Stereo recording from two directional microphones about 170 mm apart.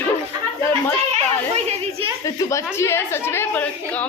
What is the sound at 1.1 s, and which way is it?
Children playing, 35° right (ahead or behind).